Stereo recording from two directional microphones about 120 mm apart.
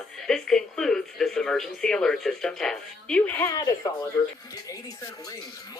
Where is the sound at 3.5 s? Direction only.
30° left (ahead or behind).